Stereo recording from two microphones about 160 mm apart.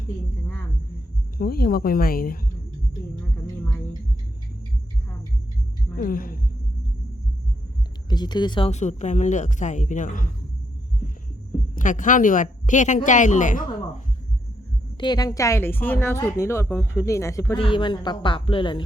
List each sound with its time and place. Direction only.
1.4 s speech: 70° left (ahead or behind)
6.0 s speech: 60° left (ahead or behind)
8.1 s speech: 25° left (ahead or behind)
8.7 s speech: 45° left (ahead or behind)
11.7 s speech: 55° left (ahead or behind)
14.9 s a woman's voice: 25° left (ahead or behind)
17.6 s speech: 30° left (ahead or behind)